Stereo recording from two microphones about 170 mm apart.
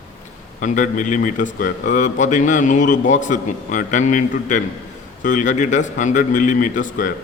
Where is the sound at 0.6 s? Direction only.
50° left (ahead or behind).